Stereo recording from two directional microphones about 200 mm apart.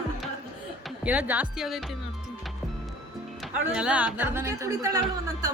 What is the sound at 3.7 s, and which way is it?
Speech, 5° right (ahead or behind).